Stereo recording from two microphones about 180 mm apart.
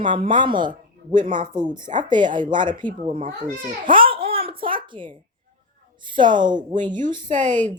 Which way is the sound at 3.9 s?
30° right (ahead or behind).